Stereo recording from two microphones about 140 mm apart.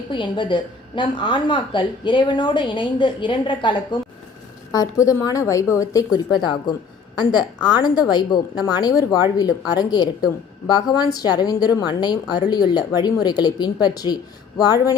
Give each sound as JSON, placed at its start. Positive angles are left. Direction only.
{"t": 0.1, "sound": "a woman's voice", "side_deg": 35}